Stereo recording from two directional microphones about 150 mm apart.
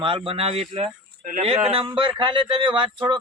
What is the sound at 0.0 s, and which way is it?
Speech, 35° right (ahead or behind).